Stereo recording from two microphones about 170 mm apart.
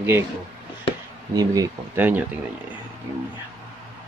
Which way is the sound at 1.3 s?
20° right (ahead or behind).